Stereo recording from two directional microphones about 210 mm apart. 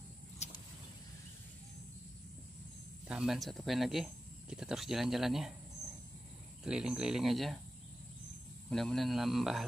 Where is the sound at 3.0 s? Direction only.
5° right (ahead or behind).